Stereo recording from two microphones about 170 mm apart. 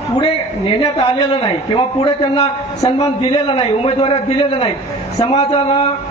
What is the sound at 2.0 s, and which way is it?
A man's voice, 30° left (ahead or behind).